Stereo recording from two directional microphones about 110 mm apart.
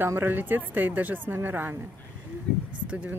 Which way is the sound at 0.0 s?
20° right (ahead or behind).